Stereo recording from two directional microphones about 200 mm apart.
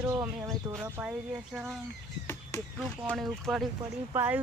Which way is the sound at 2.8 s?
5° right (ahead or behind).